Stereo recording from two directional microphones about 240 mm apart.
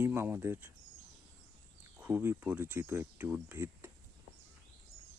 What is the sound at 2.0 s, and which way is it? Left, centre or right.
Speech, centre.